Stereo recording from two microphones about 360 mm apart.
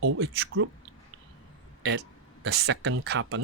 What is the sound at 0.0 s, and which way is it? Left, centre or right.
Speech, right.